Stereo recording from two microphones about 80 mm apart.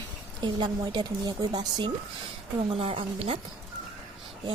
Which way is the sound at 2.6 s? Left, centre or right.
Right.